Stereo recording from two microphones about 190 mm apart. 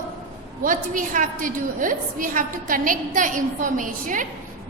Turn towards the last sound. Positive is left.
turn(degrees=-45)  # may be behind; listen again after turning